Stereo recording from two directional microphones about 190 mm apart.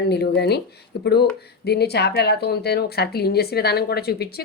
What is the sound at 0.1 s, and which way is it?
Speech, 60° left (ahead or behind).